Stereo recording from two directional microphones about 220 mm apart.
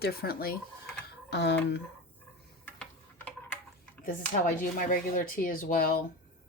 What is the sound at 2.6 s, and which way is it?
Tick-tock, 5° left (ahead or behind).